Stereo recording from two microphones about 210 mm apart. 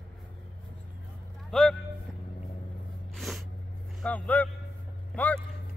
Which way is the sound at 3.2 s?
Centre (ahead or behind).